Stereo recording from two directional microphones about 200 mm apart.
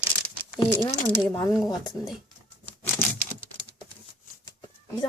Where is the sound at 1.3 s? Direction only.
20° left (ahead or behind).